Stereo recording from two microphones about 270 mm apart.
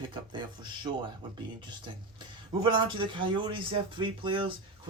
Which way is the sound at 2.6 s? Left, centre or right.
Centre.